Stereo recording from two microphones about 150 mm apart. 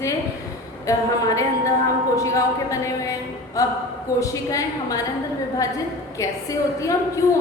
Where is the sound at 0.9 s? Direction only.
20° left (ahead or behind).